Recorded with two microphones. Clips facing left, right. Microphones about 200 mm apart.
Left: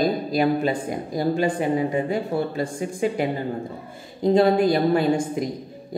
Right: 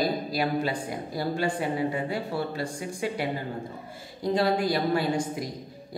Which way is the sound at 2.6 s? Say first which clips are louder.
Left 7 dB; 20° left (ahead or behind).